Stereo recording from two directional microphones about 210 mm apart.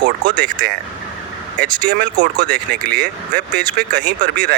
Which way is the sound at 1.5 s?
55° right (ahead or behind).